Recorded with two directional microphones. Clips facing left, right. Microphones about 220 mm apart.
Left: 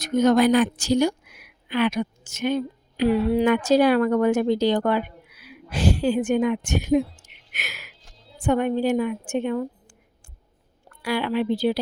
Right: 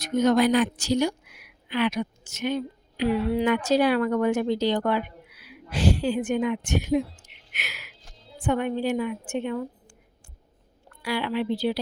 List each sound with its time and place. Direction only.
0.0 s speech: 45° left (ahead or behind)
11.0 s speech: 45° left (ahead or behind)